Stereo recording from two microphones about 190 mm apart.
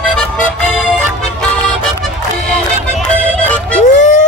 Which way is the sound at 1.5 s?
5° left (ahead or behind).